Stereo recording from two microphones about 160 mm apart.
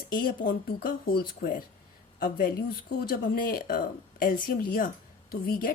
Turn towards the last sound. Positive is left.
turn(degrees=65)  # may be behind; listen again after turning